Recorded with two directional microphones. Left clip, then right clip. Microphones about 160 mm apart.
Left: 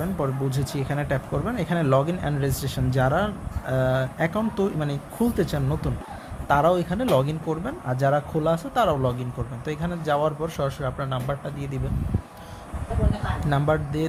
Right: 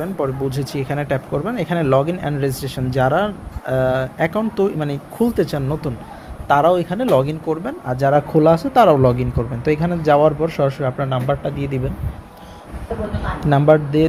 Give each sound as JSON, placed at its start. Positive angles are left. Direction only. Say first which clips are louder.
{"t": 0.0, "sound": "speech", "louder": "right 6 dB", "side_deg": -10}
{"t": 13.4, "sound": "speech", "louder": "right 11 dB", "side_deg": -5}